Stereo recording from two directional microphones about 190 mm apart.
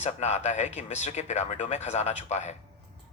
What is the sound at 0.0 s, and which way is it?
Speech, 35° left (ahead or behind).